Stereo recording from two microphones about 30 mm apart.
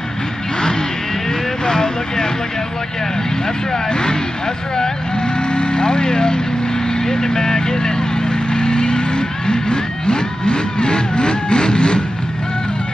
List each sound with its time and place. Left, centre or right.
1.7 s vehicle: left
3.9 s speech: left
4.7 s vehicle: left